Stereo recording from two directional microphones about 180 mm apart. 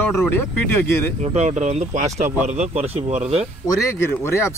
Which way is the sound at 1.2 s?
35° right (ahead or behind).